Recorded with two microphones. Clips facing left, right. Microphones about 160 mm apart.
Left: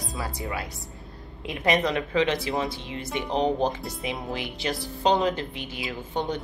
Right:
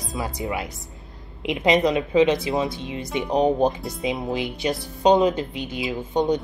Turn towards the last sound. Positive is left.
turn(degrees=-15)  # may be behind; listen again after turning